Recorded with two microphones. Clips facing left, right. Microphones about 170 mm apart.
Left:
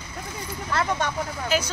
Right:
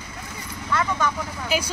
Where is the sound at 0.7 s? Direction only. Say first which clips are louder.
Right 1 dB; 35° left (ahead or behind).